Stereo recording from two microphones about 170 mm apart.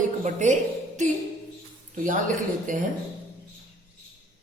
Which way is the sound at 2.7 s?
50° right (ahead or behind).